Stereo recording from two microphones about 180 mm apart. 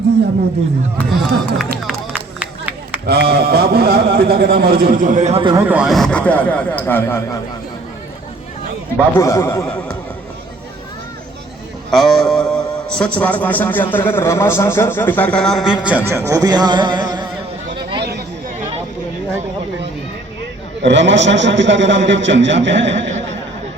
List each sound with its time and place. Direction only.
0.9 s a man's voice: centre (ahead or behind)
2.4 s a sound: 10° right (ahead or behind)
3.1 s a man's voice: 60° right (ahead or behind); by 5.5 s 30° right (ahead or behind)
5.5 s a man's voice: 10° right (ahead or behind); by 7.2 s 10° left (ahead or behind)
9.0 s a man's voice: 15° left (ahead or behind)
11.9 s a man's voice: centre (ahead or behind); by 17.2 s 25° right (ahead or behind)
20.8 s a man's voice: 80° right